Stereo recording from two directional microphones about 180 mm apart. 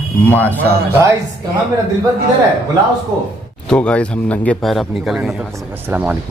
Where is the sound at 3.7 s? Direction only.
5° left (ahead or behind).